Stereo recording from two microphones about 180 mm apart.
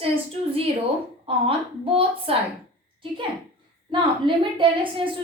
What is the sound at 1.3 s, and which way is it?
A woman's voice, 30° right (ahead or behind).